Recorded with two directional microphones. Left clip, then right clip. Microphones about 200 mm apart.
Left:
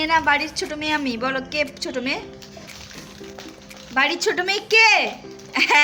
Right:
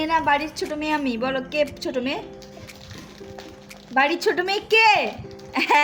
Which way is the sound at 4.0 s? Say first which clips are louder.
Even; 30° right (ahead or behind).